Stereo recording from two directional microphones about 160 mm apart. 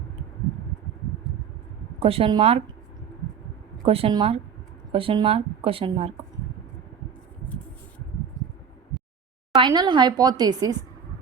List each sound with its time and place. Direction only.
2.0 s speech: 35° right (ahead or behind)
3.8 s speech: 35° right (ahead or behind)
9.6 s speech: 30° right (ahead or behind)